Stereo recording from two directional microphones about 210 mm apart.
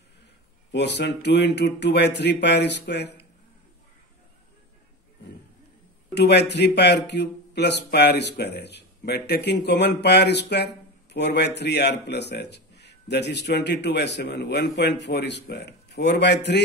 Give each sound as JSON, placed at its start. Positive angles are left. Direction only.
{"t": 0.7, "sound": "speech", "side_deg": 55}
{"t": 6.1, "sound": "speech", "side_deg": 55}